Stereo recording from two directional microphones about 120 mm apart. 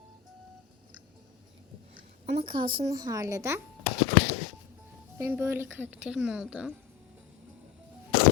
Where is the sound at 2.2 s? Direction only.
55° right (ahead or behind).